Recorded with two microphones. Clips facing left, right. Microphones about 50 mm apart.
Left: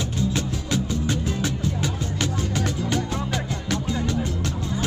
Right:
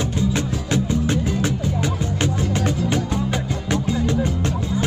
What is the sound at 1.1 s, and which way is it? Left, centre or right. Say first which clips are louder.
Music: right 4 dB; centre.